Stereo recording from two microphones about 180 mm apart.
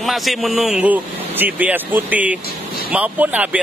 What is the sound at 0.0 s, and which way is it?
A man's voice, centre (ahead or behind).